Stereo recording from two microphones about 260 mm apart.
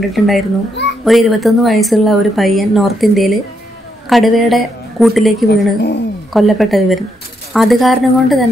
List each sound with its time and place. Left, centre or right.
0.2 s speech: centre
5.5 s a woman's voice: left
6.3 s speech: centre